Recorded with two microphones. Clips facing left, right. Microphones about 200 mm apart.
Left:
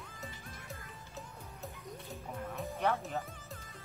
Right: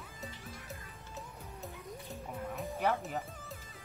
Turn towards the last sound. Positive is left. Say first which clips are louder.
# even
turn(degrees=-5)  # may be behind; listen again after turning